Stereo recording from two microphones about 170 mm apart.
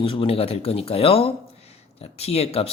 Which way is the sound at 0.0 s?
30° left (ahead or behind).